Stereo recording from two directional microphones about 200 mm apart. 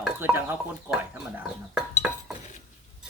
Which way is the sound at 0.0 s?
10° right (ahead or behind).